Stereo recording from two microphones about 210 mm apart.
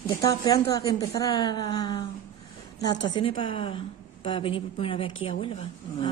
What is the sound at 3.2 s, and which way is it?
A woman's voice, 25° left (ahead or behind).